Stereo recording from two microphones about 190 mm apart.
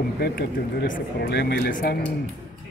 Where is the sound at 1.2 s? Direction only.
60° left (ahead or behind).